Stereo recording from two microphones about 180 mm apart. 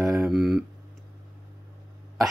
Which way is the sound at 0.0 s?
Centre (ahead or behind).